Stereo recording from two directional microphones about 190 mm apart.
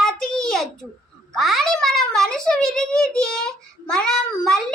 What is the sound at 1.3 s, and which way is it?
A child's voice, centre (ahead or behind).